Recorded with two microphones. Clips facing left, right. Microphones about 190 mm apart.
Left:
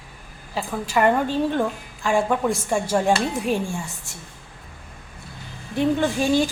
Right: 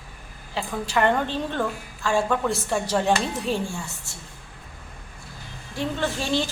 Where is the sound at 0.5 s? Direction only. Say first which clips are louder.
Left 2 dB; 5° left (ahead or behind).